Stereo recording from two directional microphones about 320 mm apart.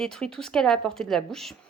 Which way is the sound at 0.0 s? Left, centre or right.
Centre.